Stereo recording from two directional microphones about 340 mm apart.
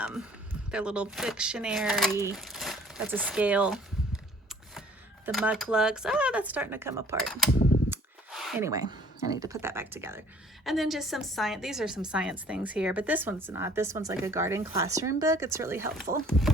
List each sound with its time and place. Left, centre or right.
0.0 s a sound: centre
0.7 s a woman's voice: centre
5.2 s a woman's voice: centre